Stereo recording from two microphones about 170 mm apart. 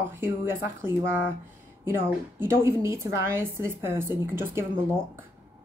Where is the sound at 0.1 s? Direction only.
15° right (ahead or behind).